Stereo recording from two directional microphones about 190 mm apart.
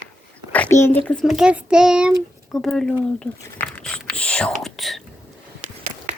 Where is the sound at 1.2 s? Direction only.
5° right (ahead or behind).